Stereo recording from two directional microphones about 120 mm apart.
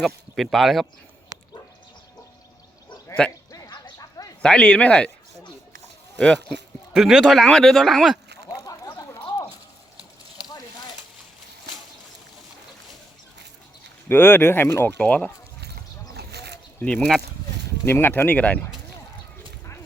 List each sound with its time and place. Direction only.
0.0 s speech: centre (ahead or behind)
3.2 s speech: 10° left (ahead or behind)
3.5 s a sound: 35° left (ahead or behind)
3.9 s bow-wow: 30° left (ahead or behind)
4.4 s speech: 10° left (ahead or behind)
6.1 s speech: 5° left (ahead or behind)
8.6 s a sound: 30° left (ahead or behind)
14.1 s speech: 15° left (ahead or behind)
16.8 s speech: 10° left (ahead or behind)